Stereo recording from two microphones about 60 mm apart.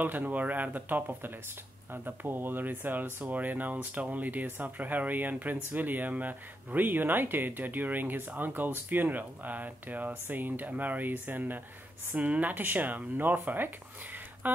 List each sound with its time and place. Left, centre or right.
0.0 s speech: right